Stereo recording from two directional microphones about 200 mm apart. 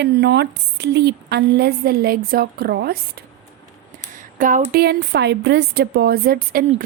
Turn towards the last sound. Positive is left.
turn(degrees=-50)  # may be behind; listen again after turning